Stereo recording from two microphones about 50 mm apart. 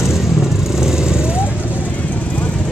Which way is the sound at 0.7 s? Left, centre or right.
Centre.